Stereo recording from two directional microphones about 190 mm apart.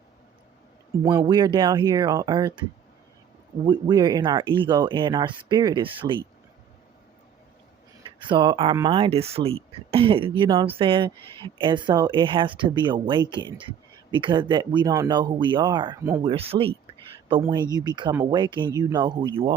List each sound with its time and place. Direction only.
1.2 s speech: 25° right (ahead or behind)
3.7 s speech: 25° right (ahead or behind)
8.3 s speech: 25° right (ahead or behind)